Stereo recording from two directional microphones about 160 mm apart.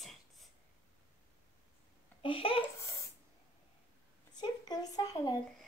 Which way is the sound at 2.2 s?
35° left (ahead or behind).